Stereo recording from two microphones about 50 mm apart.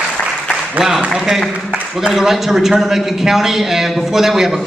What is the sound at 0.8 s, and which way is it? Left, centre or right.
A man's voice, centre.